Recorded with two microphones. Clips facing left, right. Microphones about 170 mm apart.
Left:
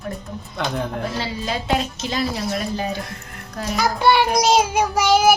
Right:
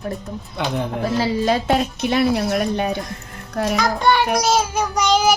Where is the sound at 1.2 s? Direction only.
50° right (ahead or behind).